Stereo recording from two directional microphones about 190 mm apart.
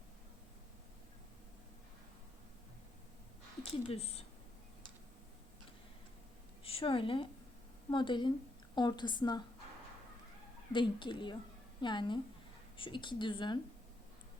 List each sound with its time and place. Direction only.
3.7 s speech: 30° left (ahead or behind)
6.7 s a woman's voice: 30° left (ahead or behind)
10.7 s speech: 25° left (ahead or behind)